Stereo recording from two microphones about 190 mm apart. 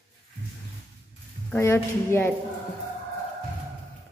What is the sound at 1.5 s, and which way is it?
Speech, 15° left (ahead or behind).